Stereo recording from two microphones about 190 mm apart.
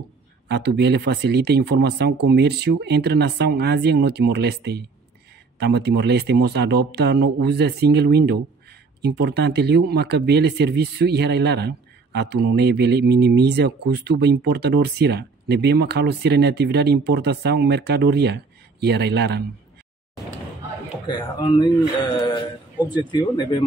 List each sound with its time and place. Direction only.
0.5 s speech: 60° right (ahead or behind)
21.1 s speech: 25° left (ahead or behind)